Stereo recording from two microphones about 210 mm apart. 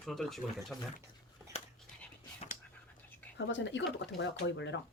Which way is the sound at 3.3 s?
60° left (ahead or behind).